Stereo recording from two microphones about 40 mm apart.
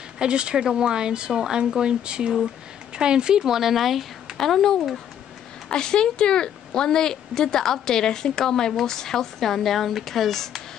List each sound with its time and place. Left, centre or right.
0.2 s speech: right; by 4.0 s centre
4.4 s a woman's voice: centre
5.7 s a woman's voice: centre